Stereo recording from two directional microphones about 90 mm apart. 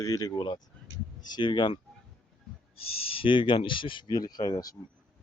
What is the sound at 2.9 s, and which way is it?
Speech, 90° left.